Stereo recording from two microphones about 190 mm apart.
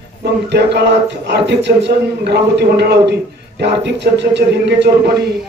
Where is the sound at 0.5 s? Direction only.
65° right (ahead or behind).